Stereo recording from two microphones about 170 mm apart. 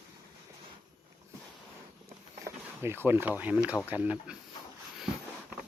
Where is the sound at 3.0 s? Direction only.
15° right (ahead or behind).